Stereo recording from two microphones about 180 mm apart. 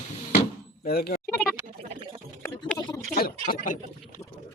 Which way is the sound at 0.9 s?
60° left (ahead or behind).